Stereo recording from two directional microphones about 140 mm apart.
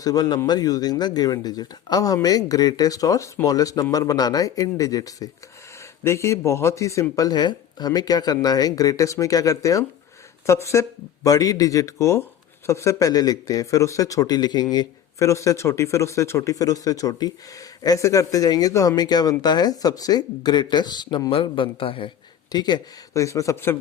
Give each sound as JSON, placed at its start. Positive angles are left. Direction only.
{"t": 0.0, "sound": "speech", "side_deg": 25}